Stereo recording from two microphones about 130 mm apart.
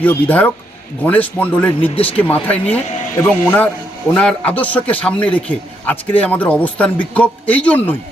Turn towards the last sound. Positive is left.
turn(degrees=10)  # may be behind; listen again after turning